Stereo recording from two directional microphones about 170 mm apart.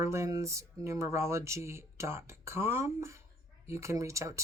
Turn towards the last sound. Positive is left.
turn(degrees=-20)  # may be behind; listen again after turning